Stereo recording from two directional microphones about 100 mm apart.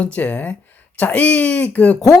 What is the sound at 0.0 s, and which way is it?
Speech, 15° left (ahead or behind).